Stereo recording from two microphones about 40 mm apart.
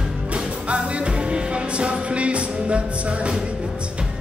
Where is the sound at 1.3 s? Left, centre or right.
Right.